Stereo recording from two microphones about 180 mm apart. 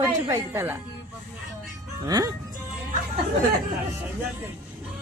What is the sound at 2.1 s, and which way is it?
Speech, 20° right (ahead or behind).